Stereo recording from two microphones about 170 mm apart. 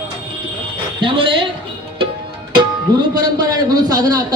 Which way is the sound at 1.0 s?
30° right (ahead or behind).